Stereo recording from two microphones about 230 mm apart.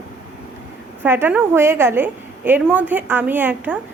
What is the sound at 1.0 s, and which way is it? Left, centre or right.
Speech, centre.